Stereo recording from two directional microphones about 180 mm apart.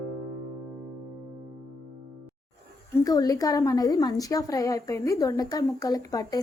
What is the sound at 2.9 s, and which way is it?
A woman's voice, 20° left (ahead or behind).